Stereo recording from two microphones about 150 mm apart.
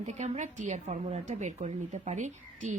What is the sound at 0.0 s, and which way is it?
A woman's voice, 50° right (ahead or behind).